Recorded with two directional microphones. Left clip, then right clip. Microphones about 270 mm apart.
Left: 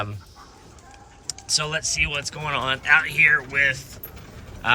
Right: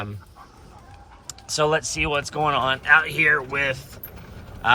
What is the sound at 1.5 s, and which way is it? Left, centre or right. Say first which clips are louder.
Speech: right 3 dB; centre.